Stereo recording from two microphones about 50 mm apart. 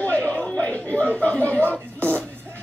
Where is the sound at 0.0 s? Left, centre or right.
Left.